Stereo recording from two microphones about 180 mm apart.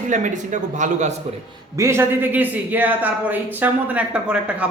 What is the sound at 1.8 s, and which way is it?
Speech, 15° right (ahead or behind).